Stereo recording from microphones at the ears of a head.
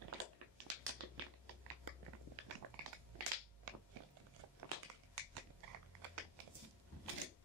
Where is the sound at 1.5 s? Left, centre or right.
Right.